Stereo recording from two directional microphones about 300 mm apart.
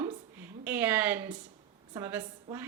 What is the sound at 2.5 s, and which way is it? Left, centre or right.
Speech, centre.